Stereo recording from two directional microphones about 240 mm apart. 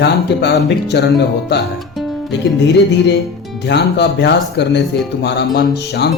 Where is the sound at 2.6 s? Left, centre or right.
Left.